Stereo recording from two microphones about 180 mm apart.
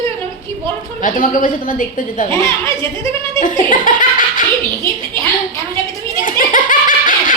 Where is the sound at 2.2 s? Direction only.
15° left (ahead or behind).